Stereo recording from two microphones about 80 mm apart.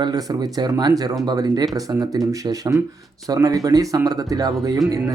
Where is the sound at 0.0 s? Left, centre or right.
Right.